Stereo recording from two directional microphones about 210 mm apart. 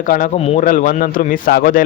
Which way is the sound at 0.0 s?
40° left (ahead or behind).